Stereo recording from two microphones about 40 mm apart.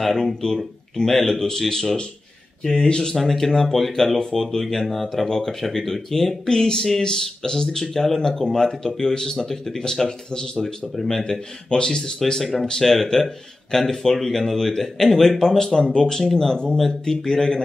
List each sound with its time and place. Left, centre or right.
0.0 s speech: centre
3.2 s speech: centre